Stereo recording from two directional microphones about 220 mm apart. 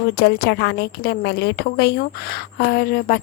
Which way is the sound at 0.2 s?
45° left (ahead or behind).